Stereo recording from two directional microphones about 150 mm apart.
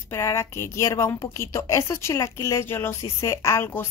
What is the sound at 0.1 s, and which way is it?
A woman's voice, 20° left (ahead or behind).